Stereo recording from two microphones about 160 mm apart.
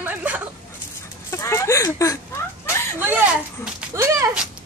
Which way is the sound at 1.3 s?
20° left (ahead or behind).